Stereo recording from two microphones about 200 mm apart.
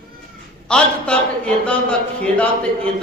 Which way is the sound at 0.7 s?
5° left (ahead or behind).